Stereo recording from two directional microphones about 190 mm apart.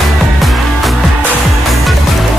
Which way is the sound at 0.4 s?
Centre (ahead or behind).